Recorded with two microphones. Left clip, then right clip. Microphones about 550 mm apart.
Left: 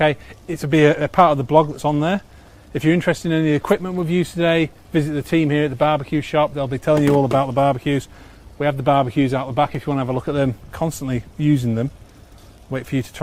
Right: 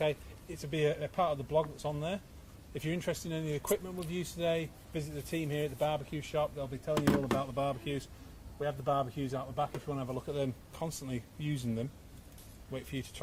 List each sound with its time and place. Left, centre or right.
0.0 s speech: left